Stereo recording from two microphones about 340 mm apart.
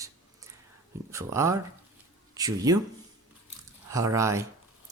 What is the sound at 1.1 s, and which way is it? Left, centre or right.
Speech, centre.